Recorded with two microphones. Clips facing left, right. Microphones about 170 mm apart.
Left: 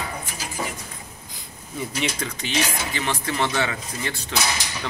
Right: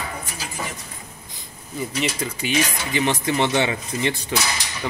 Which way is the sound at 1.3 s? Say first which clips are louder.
Right 2 dB; centre (ahead or behind).